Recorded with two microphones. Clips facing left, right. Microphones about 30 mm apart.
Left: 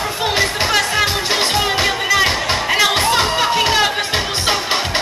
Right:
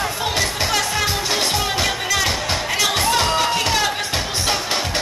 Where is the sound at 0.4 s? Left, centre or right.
Left.